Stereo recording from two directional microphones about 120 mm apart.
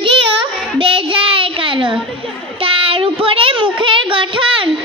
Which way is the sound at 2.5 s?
50° right (ahead or behind).